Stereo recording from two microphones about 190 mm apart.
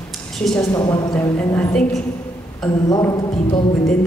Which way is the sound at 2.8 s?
20° left (ahead or behind).